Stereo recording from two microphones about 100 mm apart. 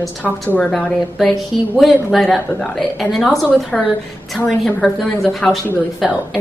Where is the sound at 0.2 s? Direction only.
15° left (ahead or behind).